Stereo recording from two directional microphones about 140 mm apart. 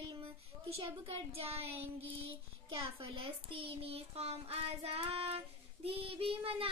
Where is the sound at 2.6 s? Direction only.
40° right (ahead or behind).